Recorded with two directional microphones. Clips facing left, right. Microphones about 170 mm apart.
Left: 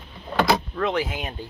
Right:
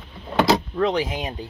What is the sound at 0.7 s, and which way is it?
Speech, 15° right (ahead or behind).